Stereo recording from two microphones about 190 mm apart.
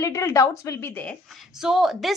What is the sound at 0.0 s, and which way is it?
A woman's voice, 15° left (ahead or behind).